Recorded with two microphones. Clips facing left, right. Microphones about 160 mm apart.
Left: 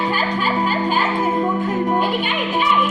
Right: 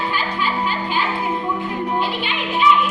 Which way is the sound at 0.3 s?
45° left (ahead or behind).